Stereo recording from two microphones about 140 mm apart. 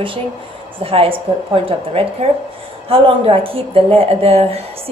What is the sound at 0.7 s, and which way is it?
A woman's voice, 40° right (ahead or behind).